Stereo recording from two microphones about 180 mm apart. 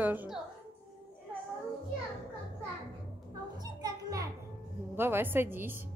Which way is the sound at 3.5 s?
20° right (ahead or behind).